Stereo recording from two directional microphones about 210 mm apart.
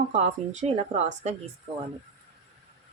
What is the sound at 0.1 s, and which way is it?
Speech, 30° right (ahead or behind).